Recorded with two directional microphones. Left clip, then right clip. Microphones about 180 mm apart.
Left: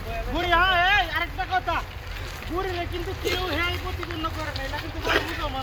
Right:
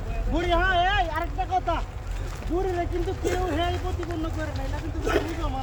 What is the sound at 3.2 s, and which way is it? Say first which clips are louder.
Speech: left 2 dB; 60° right (ahead or behind).